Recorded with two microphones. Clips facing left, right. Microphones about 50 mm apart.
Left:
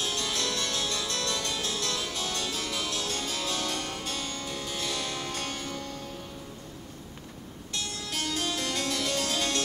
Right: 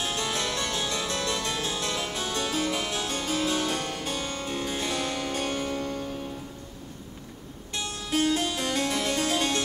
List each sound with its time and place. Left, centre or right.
0.0 s harpsichord: right
7.7 s harpsichord: right